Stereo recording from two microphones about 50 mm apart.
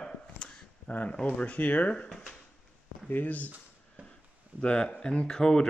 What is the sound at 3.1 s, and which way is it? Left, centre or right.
Speech, left.